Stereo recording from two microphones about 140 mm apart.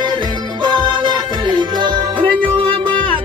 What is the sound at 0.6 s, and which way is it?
Music, 30° right (ahead or behind).